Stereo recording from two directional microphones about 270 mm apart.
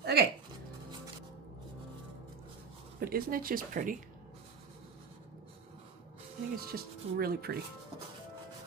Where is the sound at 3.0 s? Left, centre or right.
Right.